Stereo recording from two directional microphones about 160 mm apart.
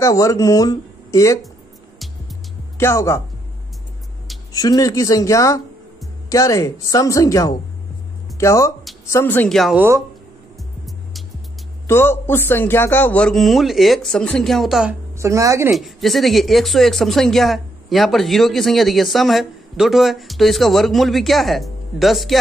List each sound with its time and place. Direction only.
0.0 s speech: 20° left (ahead or behind)
2.8 s speech: 15° left (ahead or behind)
4.5 s speech: 25° left (ahead or behind)
9.5 s speech: centre (ahead or behind)
9.8 s speech: 15° right (ahead or behind)
11.9 s speech: 15° left (ahead or behind); by 15.0 s 5° right (ahead or behind)
15.1 s speech: 20° right (ahead or behind)
15.7 s speech: centre (ahead or behind)